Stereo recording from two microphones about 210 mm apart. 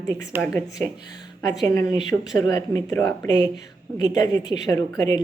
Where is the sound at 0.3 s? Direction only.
10° right (ahead or behind).